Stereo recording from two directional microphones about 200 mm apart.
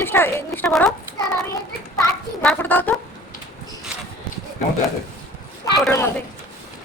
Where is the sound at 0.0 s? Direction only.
10° left (ahead or behind).